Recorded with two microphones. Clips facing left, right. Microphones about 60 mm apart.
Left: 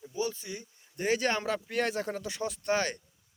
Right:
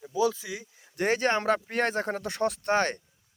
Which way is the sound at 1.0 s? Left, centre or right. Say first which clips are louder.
Right 4 dB; right.